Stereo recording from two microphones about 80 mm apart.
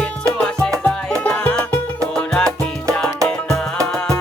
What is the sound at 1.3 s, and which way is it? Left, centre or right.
Music, centre.